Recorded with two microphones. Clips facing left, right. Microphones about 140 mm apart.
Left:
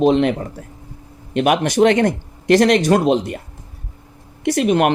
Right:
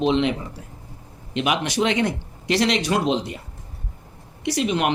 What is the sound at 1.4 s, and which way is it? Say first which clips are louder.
Speech: left 7 dB; 50° left (ahead or behind).